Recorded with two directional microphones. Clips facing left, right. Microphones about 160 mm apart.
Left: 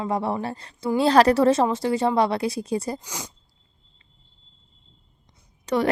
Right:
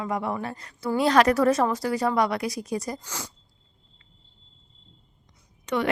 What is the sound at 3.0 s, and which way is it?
Speech, 15° left (ahead or behind).